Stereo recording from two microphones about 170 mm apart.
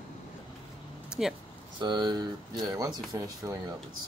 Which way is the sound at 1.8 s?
25° right (ahead or behind).